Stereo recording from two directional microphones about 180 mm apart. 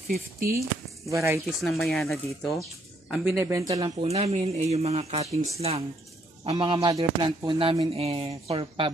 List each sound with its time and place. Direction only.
0.1 s speech: 55° right (ahead or behind)
0.6 s speech: 15° right (ahead or behind)
1.6 s speech: centre (ahead or behind)
3.3 s speech: 15° right (ahead or behind)